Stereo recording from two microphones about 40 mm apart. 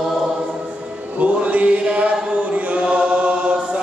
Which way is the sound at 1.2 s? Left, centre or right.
Right.